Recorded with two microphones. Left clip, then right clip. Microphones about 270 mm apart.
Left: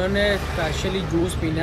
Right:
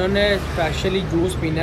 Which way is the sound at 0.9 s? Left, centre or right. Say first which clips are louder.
Right 3 dB; right.